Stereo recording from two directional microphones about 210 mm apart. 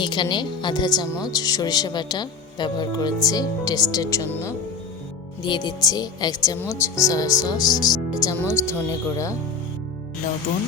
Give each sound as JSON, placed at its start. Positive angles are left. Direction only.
{"t": 0.0, "sound": "speech", "side_deg": 20}
{"t": 5.4, "sound": "speech", "side_deg": 20}